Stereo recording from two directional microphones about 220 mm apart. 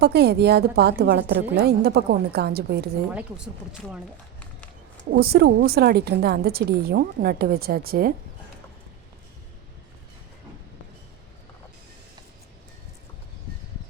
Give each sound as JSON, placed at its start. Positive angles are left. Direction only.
{"t": 0.0, "sound": "a woman's voice", "side_deg": -50}
{"t": 3.2, "sound": "speech", "side_deg": -5}
{"t": 5.1, "sound": "a woman's voice", "side_deg": -45}